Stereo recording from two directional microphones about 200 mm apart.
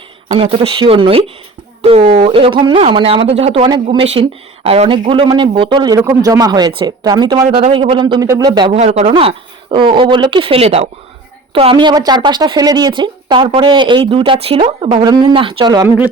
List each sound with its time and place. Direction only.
0.3 s speech: 30° right (ahead or behind)
7.4 s speech: 30° right (ahead or behind)